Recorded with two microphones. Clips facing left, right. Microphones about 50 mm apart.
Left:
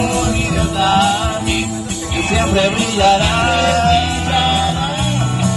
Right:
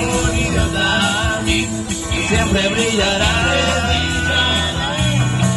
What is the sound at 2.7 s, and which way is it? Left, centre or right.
Music, right.